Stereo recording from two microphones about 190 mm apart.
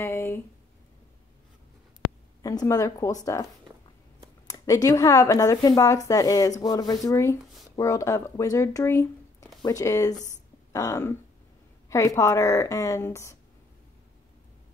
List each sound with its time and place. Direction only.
0.0 s a sound: 15° left (ahead or behind)
2.4 s a woman's voice: 15° left (ahead or behind)
4.5 s a woman's voice: 20° left (ahead or behind)